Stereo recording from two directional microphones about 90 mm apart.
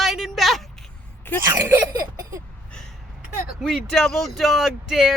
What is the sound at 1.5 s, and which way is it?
Speech, 30° right (ahead or behind).